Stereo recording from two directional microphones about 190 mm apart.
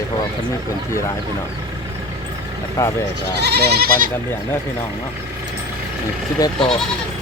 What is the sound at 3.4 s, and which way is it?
Speech, 60° right (ahead or behind).